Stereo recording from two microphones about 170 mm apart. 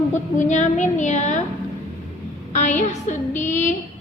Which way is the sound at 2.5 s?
45° left (ahead or behind).